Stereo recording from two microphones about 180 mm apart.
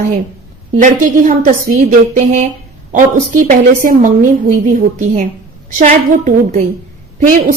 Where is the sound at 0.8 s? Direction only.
45° right (ahead or behind).